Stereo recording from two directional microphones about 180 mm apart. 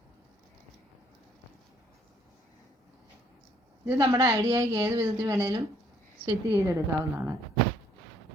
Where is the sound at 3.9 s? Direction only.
20° right (ahead or behind).